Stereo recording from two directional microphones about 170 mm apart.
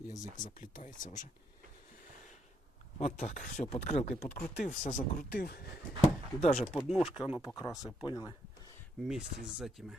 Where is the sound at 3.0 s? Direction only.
45° left (ahead or behind).